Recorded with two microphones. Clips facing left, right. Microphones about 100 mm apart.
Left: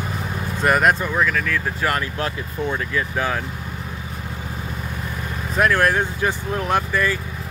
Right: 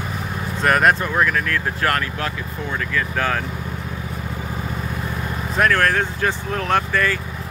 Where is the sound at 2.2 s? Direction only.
25° left (ahead or behind).